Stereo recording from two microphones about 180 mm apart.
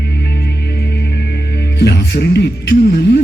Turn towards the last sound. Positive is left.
turn(degrees=65)  # may be behind; listen again after turning